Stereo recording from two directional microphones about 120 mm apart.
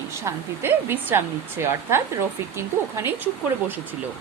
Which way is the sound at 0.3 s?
20° right (ahead or behind).